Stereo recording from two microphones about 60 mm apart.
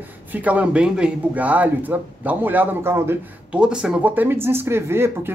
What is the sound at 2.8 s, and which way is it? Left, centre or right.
Speech, right.